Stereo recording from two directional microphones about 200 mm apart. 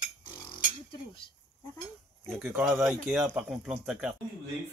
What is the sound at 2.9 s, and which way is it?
Speech, 10° right (ahead or behind).